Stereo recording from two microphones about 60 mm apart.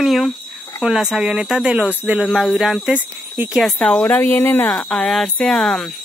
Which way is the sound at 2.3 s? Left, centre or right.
Centre.